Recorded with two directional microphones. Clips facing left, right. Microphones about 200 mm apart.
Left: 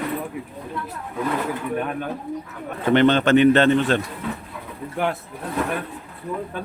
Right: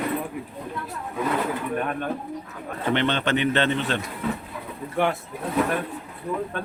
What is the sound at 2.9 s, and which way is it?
Speech, 45° left (ahead or behind).